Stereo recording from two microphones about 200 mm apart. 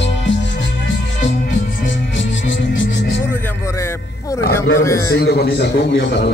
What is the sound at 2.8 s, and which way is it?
Music, 60° left (ahead or behind).